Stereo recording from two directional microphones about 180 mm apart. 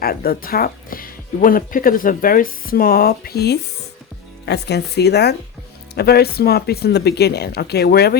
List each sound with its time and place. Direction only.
0.0 s speech: 55° left (ahead or behind)